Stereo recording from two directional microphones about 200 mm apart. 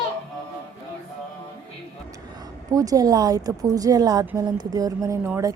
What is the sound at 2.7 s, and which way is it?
A woman's voice, 20° right (ahead or behind).